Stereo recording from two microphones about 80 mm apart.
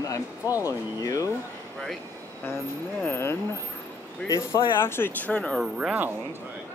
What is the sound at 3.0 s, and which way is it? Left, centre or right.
Speech, left.